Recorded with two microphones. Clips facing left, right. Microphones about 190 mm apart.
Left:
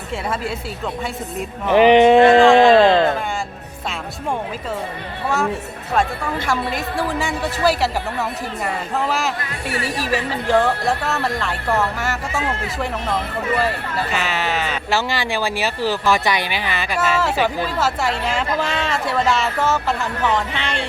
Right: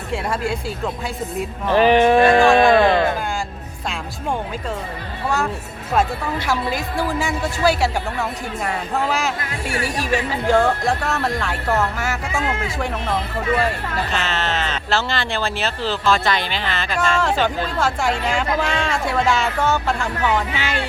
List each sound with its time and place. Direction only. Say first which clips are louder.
1.6 s speech: left 3 dB; 20° left (ahead or behind)
6.5 s speech: right 1 dB; centre (ahead or behind)
14.1 s speech: left 2 dB; 10° left (ahead or behind); by 20.8 s 5° right (ahead or behind)